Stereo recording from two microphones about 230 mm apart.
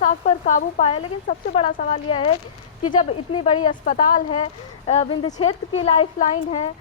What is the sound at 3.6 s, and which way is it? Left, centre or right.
A woman's voice, left.